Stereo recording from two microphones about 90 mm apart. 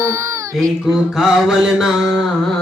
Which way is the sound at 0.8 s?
Centre (ahead or behind).